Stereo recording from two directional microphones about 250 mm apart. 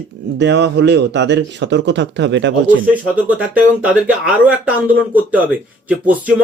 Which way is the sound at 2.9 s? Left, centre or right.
Centre.